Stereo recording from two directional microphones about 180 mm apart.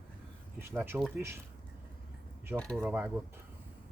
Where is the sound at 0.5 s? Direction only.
10° right (ahead or behind).